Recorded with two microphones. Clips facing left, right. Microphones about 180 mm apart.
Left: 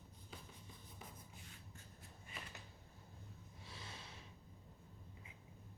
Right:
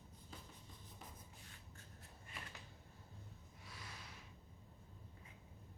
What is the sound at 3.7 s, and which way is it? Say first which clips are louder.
Snort: left 1 dB; 25° left (ahead or behind).